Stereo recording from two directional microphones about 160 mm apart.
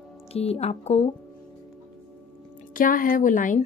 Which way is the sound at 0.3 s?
40° left (ahead or behind).